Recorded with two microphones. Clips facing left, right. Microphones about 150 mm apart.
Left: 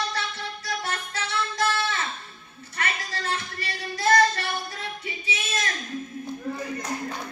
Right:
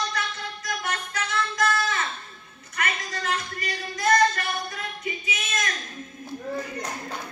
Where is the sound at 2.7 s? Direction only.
30° left (ahead or behind).